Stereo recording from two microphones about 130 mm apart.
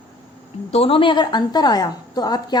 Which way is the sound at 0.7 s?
50° left (ahead or behind).